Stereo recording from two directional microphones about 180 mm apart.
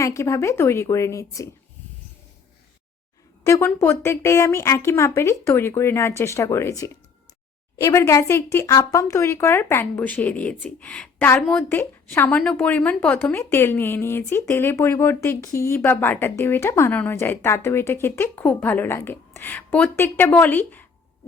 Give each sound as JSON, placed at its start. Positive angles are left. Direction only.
{"t": 0.0, "sound": "speech", "side_deg": 15}
{"t": 3.4, "sound": "speech", "side_deg": 15}